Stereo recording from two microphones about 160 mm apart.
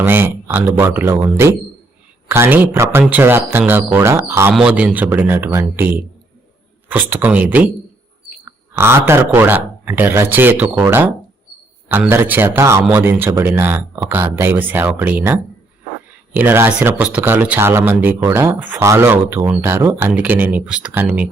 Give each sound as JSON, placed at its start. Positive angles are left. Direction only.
{"t": 0.0, "sound": "speech", "side_deg": -15}
{"t": 7.1, "sound": "speech", "side_deg": -10}
{"t": 8.4, "sound": "a sound", "side_deg": -15}
{"t": 9.0, "sound": "speech", "side_deg": -15}